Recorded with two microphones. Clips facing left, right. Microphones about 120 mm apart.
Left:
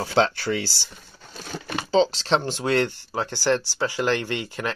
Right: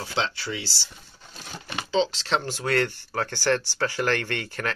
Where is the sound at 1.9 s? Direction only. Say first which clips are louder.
Left 4 dB; 35° left (ahead or behind).